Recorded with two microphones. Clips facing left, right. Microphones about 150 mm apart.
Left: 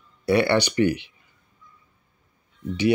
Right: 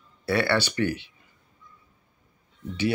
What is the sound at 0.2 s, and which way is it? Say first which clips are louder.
Speech: left 4 dB; 15° left (ahead or behind).